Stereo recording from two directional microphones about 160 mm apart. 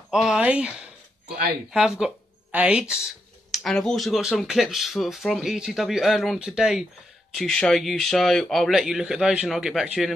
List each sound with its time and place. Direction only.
0.1 s speech: 5° right (ahead or behind)
1.2 s speech: 75° right (ahead or behind)
1.7 s speech: 5° right (ahead or behind)